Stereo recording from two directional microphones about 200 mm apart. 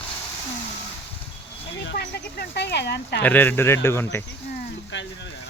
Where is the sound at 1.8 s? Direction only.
55° left (ahead or behind).